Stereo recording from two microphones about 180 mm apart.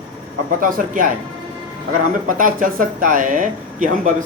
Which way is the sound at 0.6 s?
50° right (ahead or behind).